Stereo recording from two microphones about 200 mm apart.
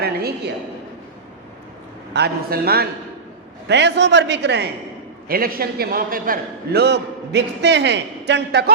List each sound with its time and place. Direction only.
0.0 s a sound: 50° right (ahead or behind)
2.1 s a man's voice: 50° right (ahead or behind)
5.3 s a man's voice: 45° right (ahead or behind)